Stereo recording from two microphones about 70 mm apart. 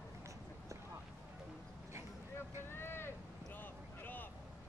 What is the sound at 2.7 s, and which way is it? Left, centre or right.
Vehicle, left.